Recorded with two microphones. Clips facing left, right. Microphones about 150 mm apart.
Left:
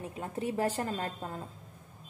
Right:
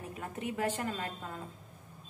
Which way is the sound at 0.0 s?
25° left (ahead or behind).